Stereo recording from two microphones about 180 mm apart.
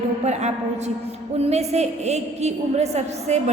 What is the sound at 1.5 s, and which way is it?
A woman's voice, 35° right (ahead or behind).